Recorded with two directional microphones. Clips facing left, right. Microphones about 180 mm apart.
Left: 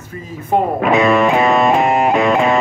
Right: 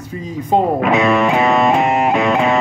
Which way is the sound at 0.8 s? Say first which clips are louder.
Left 1 dB; 45° left (ahead or behind).